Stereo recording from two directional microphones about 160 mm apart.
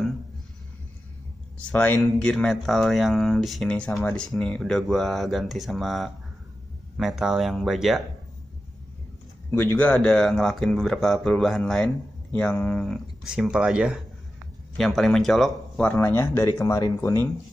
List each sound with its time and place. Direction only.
1.6 s speech: 10° left (ahead or behind)
9.5 s speech: 15° left (ahead or behind)
16.0 s speech: 15° left (ahead or behind)